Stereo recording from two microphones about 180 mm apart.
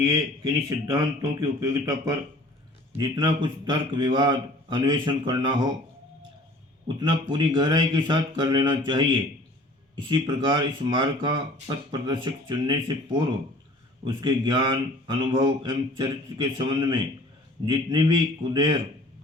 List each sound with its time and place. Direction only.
0.0 s speech: 20° right (ahead or behind)
6.8 s speech: 25° right (ahead or behind)